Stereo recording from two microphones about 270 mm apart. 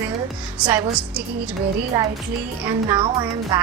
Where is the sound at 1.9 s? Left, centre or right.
Centre.